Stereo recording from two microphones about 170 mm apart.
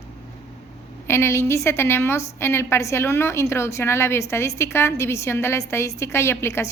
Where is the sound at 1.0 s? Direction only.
15° left (ahead or behind).